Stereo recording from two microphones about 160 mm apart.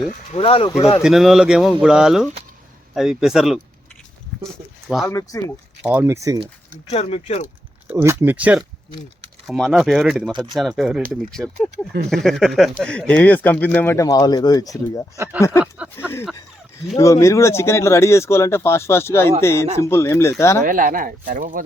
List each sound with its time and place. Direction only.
0.3 s speech: 35° left (ahead or behind)
1.0 s speech: centre (ahead or behind)
5.0 s speech: 20° left (ahead or behind)
5.8 s speech: 5° right (ahead or behind)
6.1 s speech: 20° right (ahead or behind)
6.9 s speech: 40° left (ahead or behind)
7.9 s speech: 15° right (ahead or behind); by 15.0 s 20° left (ahead or behind)
15.1 s speech: 20° right (ahead or behind)
15.4 s speech: 15° left (ahead or behind)
20.7 s speech: 60° right (ahead or behind)